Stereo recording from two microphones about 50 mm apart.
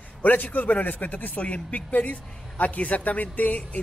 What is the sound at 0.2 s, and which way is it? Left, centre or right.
Speech, left.